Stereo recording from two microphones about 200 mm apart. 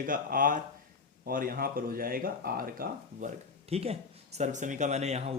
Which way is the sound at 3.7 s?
30° right (ahead or behind).